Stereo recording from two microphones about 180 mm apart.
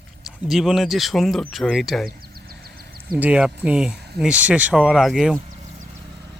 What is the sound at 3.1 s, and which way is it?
Speech, 5° right (ahead or behind).